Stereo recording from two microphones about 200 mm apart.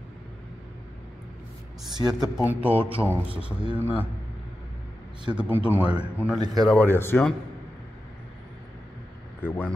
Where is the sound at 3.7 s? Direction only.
10° left (ahead or behind).